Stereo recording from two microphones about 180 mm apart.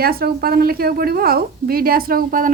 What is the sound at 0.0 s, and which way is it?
A woman's voice, 55° right (ahead or behind).